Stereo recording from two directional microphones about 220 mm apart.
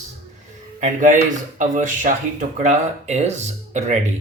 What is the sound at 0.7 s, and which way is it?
Speech, 35° right (ahead or behind).